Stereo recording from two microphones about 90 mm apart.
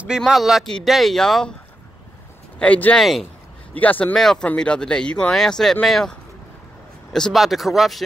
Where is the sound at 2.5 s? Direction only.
15° left (ahead or behind).